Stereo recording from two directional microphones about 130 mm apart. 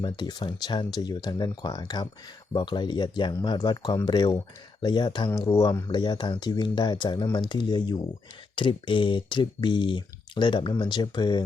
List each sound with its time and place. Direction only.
0.0 s speech: 35° left (ahead or behind)
5.9 s speech: 35° left (ahead or behind)